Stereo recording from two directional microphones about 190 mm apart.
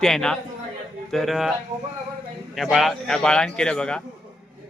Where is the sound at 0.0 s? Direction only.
5° left (ahead or behind).